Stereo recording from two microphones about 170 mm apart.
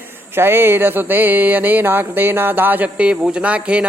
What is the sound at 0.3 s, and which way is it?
Speech, 15° right (ahead or behind).